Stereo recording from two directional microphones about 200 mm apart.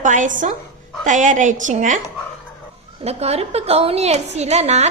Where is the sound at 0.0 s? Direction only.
40° right (ahead or behind).